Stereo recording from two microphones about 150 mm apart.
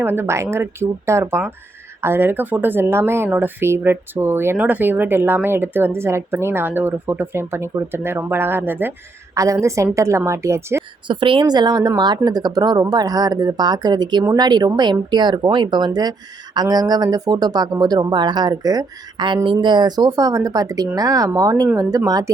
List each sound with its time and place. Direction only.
0.0 s speech: 15° right (ahead or behind)
11.1 s speech: 35° right (ahead or behind)